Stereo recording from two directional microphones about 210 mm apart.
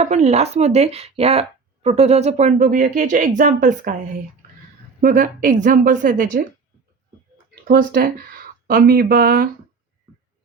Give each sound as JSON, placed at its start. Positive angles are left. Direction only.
{"t": 0.0, "sound": "speech", "side_deg": -35}
{"t": 7.7, "sound": "speech", "side_deg": -45}